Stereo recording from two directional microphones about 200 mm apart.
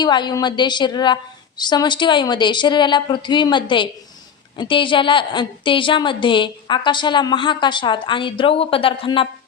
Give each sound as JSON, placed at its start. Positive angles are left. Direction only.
{"t": 0.0, "sound": "a woman's voice", "side_deg": 20}